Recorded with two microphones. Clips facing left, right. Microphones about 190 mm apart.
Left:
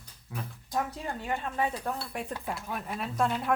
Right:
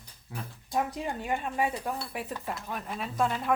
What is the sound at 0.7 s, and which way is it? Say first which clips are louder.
Speech: right 2 dB; 15° right (ahead or behind).